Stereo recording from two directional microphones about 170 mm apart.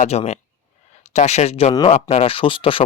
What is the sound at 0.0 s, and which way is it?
Speech, 40° left (ahead or behind).